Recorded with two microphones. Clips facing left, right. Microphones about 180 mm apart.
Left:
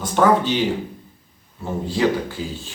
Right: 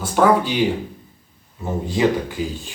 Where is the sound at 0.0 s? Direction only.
5° right (ahead or behind).